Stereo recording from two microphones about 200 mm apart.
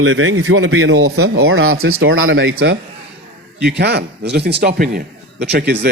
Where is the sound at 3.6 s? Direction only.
55° right (ahead or behind).